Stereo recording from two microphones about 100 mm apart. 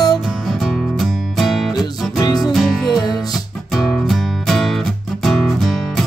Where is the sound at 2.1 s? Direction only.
40° left (ahead or behind).